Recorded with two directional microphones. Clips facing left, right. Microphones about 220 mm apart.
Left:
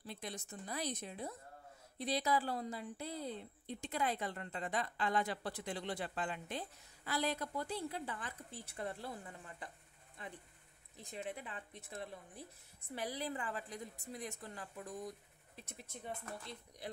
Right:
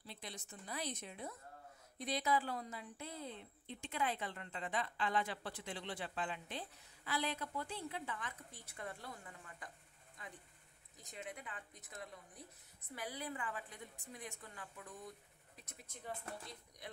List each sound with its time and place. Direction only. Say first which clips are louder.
0.0 s a woman's voice: left 5 dB; 50° left (ahead or behind); by 9.7 s 30° left (ahead or behind)
11.0 s a woman's voice: left 5 dB; 30° left (ahead or behind)